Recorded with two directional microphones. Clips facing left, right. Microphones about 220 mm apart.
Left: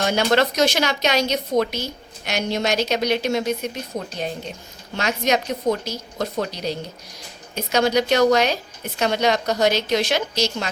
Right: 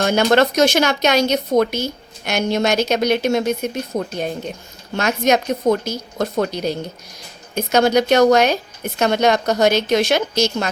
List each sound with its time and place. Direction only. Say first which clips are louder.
0.0 s speech: right 4 dB; 50° right (ahead or behind)